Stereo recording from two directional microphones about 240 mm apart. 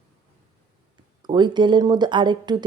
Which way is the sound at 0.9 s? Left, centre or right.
Centre.